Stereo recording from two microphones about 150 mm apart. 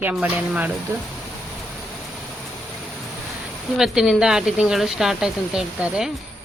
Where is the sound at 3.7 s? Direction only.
Centre (ahead or behind).